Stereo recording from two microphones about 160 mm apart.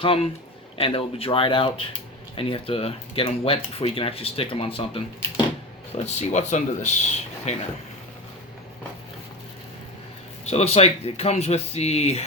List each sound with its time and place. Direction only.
0.0 s speech: 35° left (ahead or behind)
5.9 s speech: 45° left (ahead or behind)
10.5 s speech: 40° left (ahead or behind)